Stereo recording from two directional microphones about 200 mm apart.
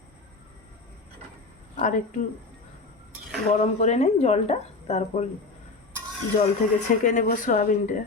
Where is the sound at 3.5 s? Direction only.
35° left (ahead or behind).